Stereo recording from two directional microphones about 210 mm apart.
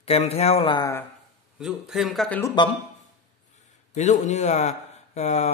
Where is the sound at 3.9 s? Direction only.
35° left (ahead or behind).